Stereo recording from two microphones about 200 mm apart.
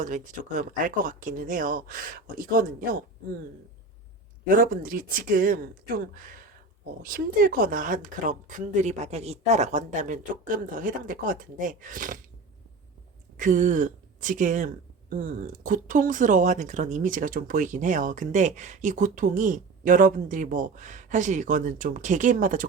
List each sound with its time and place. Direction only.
0.0 s speech: 40° right (ahead or behind)
4.4 s speech: 45° right (ahead or behind)
13.3 s speech: 40° right (ahead or behind)